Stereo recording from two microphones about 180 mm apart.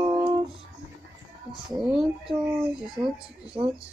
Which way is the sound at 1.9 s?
5° right (ahead or behind).